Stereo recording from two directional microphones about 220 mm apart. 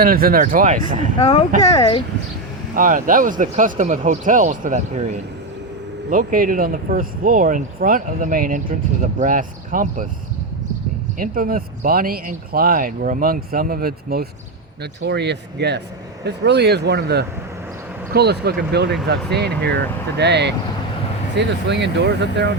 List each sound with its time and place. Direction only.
0.0 s speech: 40° right (ahead or behind)
1.2 s speech: 25° left (ahead or behind)
2.7 s speech: 35° right (ahead or behind)
11.2 s speech: 40° right (ahead or behind)